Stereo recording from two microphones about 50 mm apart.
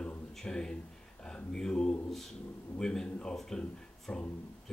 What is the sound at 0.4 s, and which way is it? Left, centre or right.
Speech, centre.